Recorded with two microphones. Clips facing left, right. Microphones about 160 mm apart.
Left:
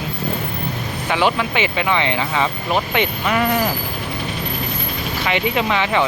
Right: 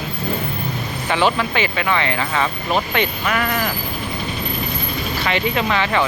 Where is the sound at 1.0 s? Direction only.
10° left (ahead or behind).